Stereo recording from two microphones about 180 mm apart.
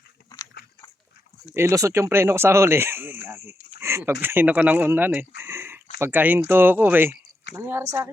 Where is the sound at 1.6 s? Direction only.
15° right (ahead or behind).